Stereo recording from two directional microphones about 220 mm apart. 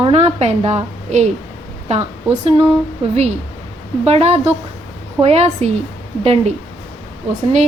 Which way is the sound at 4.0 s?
30° right (ahead or behind).